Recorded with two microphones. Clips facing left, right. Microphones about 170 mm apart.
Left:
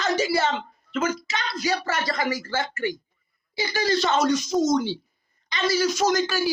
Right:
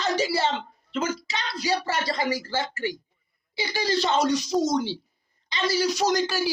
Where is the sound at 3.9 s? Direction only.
30° right (ahead or behind).